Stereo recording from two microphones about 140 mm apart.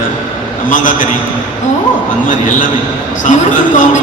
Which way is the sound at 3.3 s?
65° left (ahead or behind).